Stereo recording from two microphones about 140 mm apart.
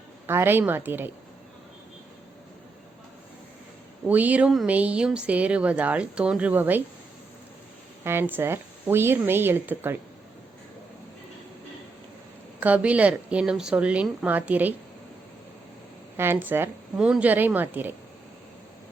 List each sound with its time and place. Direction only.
0.3 s speech: 15° right (ahead or behind)
4.0 s speech: 10° right (ahead or behind)
8.0 s speech: 15° right (ahead or behind)
12.5 s speech: 10° right (ahead or behind)
16.1 s speech: 15° right (ahead or behind)